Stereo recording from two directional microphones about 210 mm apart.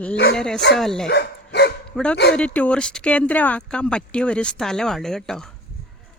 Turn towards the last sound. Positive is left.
turn(degrees=0)  # may be behind; listen again after turning